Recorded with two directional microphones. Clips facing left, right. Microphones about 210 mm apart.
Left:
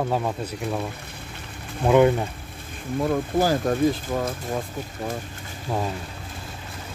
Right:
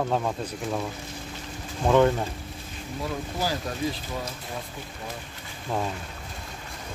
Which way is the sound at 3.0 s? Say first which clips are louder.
Left 8 dB; 50° left (ahead or behind).